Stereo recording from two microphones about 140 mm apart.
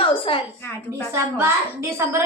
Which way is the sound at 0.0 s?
40° left (ahead or behind).